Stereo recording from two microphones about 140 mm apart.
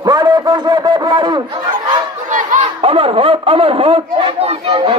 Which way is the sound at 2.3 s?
65° right (ahead or behind).